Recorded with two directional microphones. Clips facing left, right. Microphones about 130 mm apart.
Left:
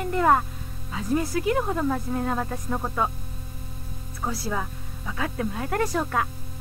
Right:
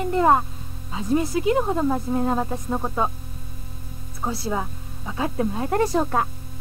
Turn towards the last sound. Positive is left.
turn(degrees=-25)  # may be behind; listen again after turning